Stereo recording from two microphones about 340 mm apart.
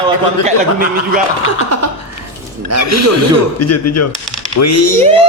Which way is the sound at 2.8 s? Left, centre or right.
Left.